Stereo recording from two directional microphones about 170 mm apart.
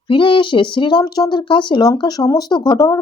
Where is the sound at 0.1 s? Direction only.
30° left (ahead or behind).